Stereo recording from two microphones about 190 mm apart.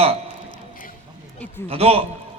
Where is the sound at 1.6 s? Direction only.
30° right (ahead or behind).